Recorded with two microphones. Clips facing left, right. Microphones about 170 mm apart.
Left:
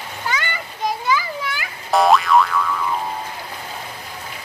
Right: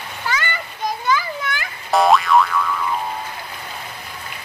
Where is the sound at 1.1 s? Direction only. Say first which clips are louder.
Right 1 dB; 10° left (ahead or behind).